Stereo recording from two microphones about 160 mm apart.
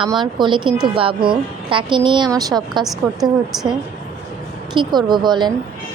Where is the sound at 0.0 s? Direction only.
30° right (ahead or behind).